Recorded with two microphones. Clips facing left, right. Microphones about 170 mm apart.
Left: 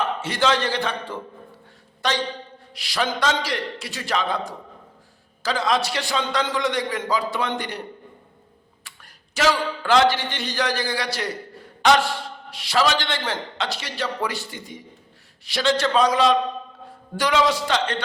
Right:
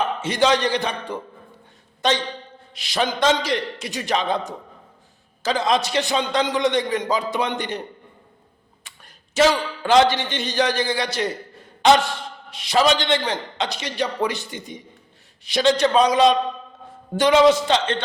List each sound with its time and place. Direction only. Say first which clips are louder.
0.0 s a man's voice: right 3 dB; 20° right (ahead or behind)
8.8 s a man's voice: right 2 dB; 20° right (ahead or behind)